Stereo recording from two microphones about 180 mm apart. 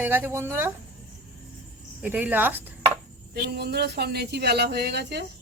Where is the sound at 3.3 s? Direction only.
65° right (ahead or behind).